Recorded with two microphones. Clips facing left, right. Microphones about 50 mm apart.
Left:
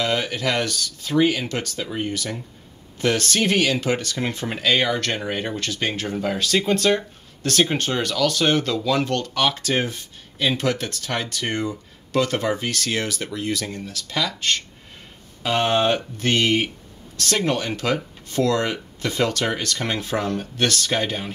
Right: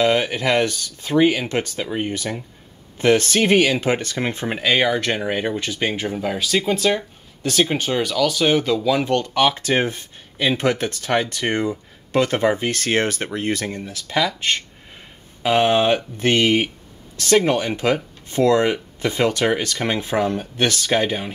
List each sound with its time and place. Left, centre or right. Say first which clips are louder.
0.0 s speech: right 5 dB; right